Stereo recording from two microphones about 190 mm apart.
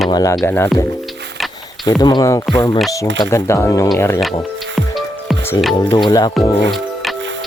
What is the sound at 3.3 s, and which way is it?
Speech, 15° left (ahead or behind).